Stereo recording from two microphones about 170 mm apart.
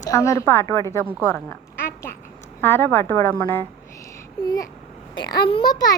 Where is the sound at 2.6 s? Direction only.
15° left (ahead or behind).